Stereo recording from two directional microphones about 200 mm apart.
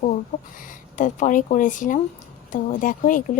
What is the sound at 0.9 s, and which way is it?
Speech, 40° left (ahead or behind).